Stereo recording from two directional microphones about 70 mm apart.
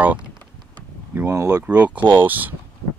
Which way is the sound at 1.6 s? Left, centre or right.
Centre.